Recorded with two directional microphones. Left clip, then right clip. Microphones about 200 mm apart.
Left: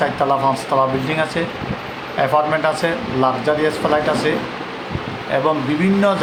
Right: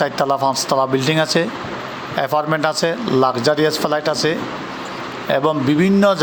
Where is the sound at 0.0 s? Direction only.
40° right (ahead or behind).